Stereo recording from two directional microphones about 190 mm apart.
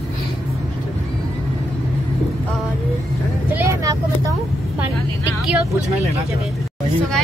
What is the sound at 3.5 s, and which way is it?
Vehicle, 15° right (ahead or behind).